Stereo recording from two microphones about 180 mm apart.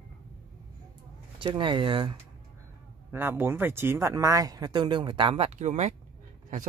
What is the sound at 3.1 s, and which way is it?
Speech, 10° right (ahead or behind).